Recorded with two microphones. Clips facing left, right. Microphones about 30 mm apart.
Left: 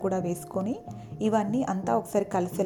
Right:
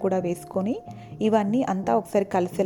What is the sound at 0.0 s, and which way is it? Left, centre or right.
A woman's voice, right.